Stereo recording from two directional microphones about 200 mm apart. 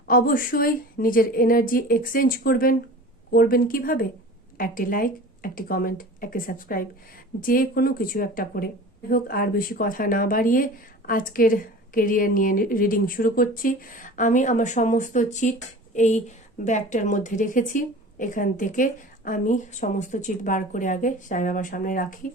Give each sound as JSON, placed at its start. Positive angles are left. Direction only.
{"t": 0.1, "sound": "a woman's voice", "side_deg": 45}